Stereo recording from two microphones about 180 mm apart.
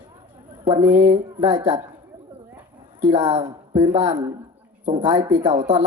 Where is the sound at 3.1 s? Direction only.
30° right (ahead or behind).